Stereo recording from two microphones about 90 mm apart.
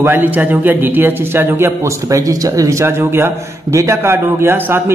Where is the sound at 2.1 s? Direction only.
40° right (ahead or behind).